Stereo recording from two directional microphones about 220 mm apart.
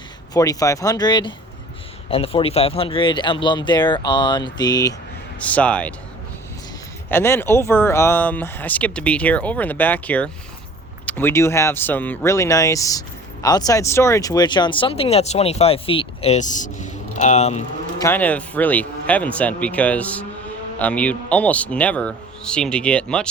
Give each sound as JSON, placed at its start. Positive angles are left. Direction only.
{"t": 0.3, "sound": "speech", "side_deg": 15}
{"t": 5.4, "sound": "a man's voice", "side_deg": 5}
{"t": 7.1, "sound": "speech", "side_deg": 10}
{"t": 18.0, "sound": "a man's voice", "side_deg": 10}